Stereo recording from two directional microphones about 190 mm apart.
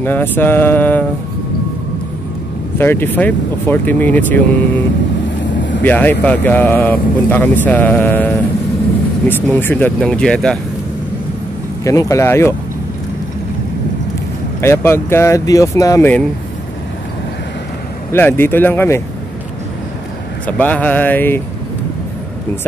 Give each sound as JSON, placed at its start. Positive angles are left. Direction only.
{"t": 0.0, "sound": "speech", "side_deg": 10}
{"t": 2.8, "sound": "speech", "side_deg": 10}
{"t": 5.8, "sound": "speech", "side_deg": 10}
{"t": 9.3, "sound": "speech", "side_deg": 10}
{"t": 11.8, "sound": "speech", "side_deg": 15}
{"t": 14.6, "sound": "speech", "side_deg": 15}
{"t": 18.1, "sound": "speech", "side_deg": 10}
{"t": 20.4, "sound": "speech", "side_deg": 10}